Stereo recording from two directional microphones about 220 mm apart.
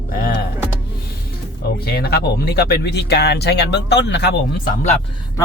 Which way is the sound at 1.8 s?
45° left (ahead or behind).